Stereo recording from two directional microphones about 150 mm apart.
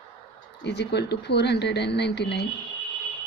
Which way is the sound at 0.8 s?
90° left.